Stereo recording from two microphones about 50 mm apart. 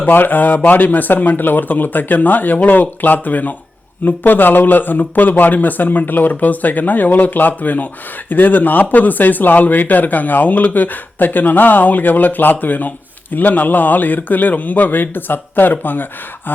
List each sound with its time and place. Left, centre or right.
0.0 s speech: left